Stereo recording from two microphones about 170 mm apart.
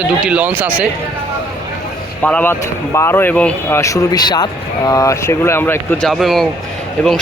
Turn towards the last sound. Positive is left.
turn(degrees=5)  # may be behind; listen again after turning